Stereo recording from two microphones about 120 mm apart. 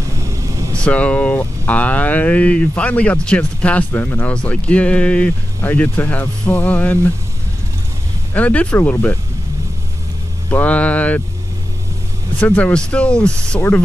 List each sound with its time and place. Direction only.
0.2 s vehicle: 25° right (ahead or behind)
0.8 s speech: 10° left (ahead or behind)
8.3 s speech: 15° left (ahead or behind)
10.5 s speech: 10° left (ahead or behind)
12.4 s speech: 15° left (ahead or behind)